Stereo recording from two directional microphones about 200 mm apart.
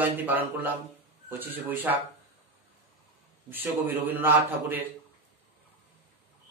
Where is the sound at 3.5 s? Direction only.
10° right (ahead or behind).